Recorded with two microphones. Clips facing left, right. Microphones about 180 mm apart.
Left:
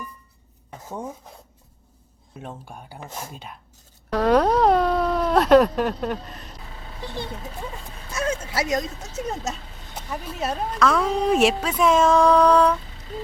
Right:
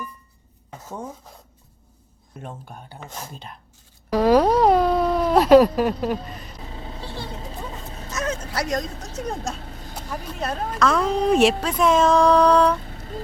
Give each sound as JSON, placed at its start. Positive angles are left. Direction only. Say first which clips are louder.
{"t": 2.3, "sound": "speech", "louder": "even", "side_deg": 5}
{"t": 8.5, "sound": "a woman's voice", "louder": "left 1 dB", "side_deg": 5}
{"t": 12.9, "sound": "music", "louder": "even", "side_deg": -55}